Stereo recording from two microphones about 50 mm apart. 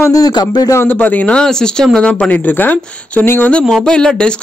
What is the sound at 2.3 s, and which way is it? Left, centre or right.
Speech, left.